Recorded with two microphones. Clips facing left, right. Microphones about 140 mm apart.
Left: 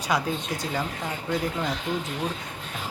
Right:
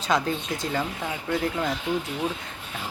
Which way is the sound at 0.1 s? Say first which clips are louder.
Right 2 dB; 10° left (ahead or behind).